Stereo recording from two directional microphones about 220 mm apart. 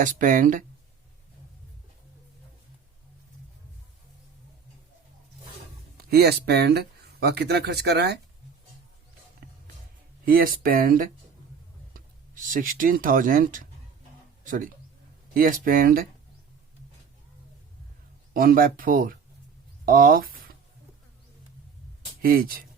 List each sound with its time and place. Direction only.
0.0 s speech: 35° right (ahead or behind)
6.1 s speech: 45° right (ahead or behind)
10.2 s speech: 40° right (ahead or behind)
18.3 s speech: 40° right (ahead or behind)
19.8 s a sound: 40° right (ahead or behind)
22.2 s speech: 40° right (ahead or behind)